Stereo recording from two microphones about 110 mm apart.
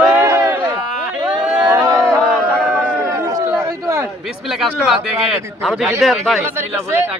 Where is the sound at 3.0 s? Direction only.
25° right (ahead or behind).